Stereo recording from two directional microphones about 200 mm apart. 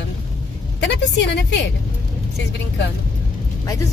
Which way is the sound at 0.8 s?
60° left (ahead or behind).